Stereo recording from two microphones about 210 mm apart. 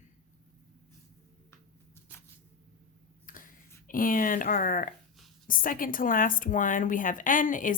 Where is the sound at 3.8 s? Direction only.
40° left (ahead or behind).